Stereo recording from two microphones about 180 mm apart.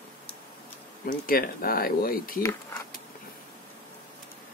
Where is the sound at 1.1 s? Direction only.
55° left (ahead or behind).